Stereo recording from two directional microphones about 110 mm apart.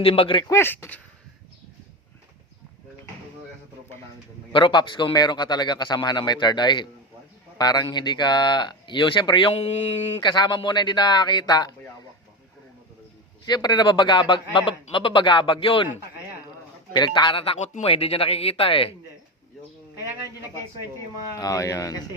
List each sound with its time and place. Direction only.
0.0 s speech: 55° left (ahead or behind)
0.4 s speech: 25° left (ahead or behind)
4.5 s speech: 45° left (ahead or behind); by 10.2 s 70° left (ahead or behind)
10.2 s speech: 40° left (ahead or behind)
13.4 s speech: 40° left (ahead or behind)
16.9 s speech: 45° left (ahead or behind)
17.6 s speech: 75° left (ahead or behind); by 18.9 s 55° left (ahead or behind)
21.3 s speech: 30° left (ahead or behind)